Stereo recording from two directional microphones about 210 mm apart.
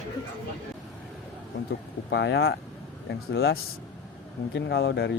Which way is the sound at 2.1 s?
60° left (ahead or behind).